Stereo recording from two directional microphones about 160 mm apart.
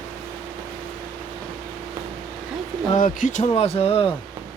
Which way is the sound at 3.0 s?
55° left (ahead or behind).